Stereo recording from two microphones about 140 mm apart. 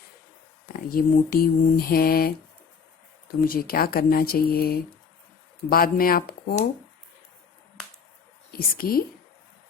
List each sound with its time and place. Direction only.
0.7 s speech: 90° left
3.4 s speech: 90° left
8.5 s speech: 90° left